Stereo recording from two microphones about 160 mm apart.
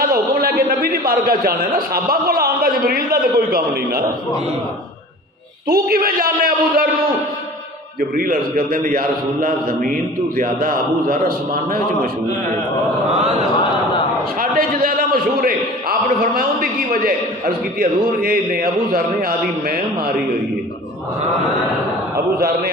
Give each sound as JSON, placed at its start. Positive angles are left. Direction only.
{"t": 0.0, "sound": "a man's voice", "side_deg": -70}
{"t": 5.6, "sound": "a man's voice", "side_deg": -70}
{"t": 8.1, "sound": "a man's voice", "side_deg": -65}
{"t": 14.3, "sound": "a man's voice", "side_deg": -65}
{"t": 22.4, "sound": "a man's voice", "side_deg": -65}